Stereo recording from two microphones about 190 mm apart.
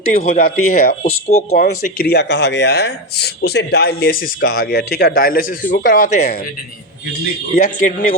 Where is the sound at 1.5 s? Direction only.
55° left (ahead or behind).